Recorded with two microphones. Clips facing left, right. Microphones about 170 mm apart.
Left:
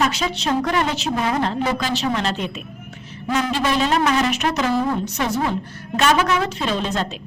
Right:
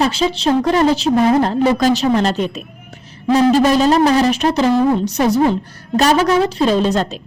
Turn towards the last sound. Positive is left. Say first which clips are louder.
# right 8 dB
turn(degrees=-40)  # may be behind; listen again after turning